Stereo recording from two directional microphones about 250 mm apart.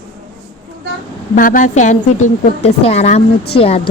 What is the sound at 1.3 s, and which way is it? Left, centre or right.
A woman's voice, left.